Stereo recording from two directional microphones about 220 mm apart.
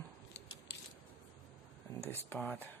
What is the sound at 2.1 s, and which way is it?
Speech, 10° left (ahead or behind).